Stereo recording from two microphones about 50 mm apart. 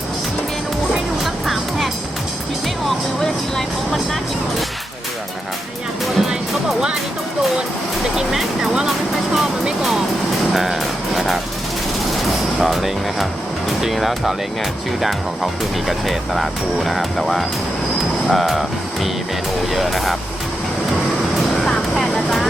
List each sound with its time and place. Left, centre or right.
0.9 s music: centre
3.2 s vehicle: centre
6.1 s music: centre
8.1 s music: centre
8.9 s vehicle: centre
10.5 s music: centre
12.5 s music: centre
13.8 s speech: centre
19.6 s speech: centre
22.1 s vehicle: centre